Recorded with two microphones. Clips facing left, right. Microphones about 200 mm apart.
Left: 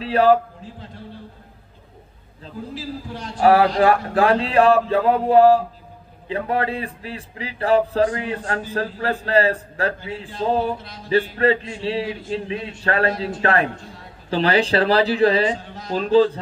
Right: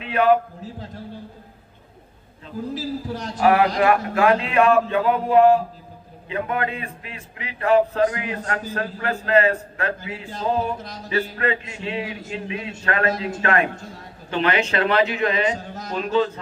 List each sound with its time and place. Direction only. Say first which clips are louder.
0.0 s speech: left 2 dB; 35° left (ahead or behind)
2.7 s a man's voice: right 4 dB; 40° right (ahead or behind)
3.4 s speech: left 2 dB; 35° left (ahead or behind)
15.5 s speech: even; 45° right (ahead or behind)
15.9 s speech: left 6 dB; 35° left (ahead or behind)